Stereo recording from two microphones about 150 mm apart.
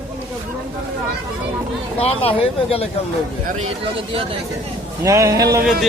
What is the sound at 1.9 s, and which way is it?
Speech, 40° left (ahead or behind).